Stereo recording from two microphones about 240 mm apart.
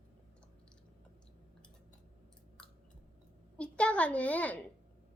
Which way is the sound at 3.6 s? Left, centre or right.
Centre.